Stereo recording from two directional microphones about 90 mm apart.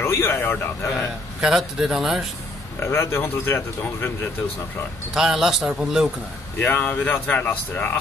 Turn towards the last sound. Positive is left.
turn(degrees=25)  # may be behind; listen again after turning